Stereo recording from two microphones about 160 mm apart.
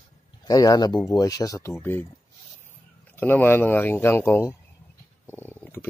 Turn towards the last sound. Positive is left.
turn(degrees=15)  # may be behind; listen again after turning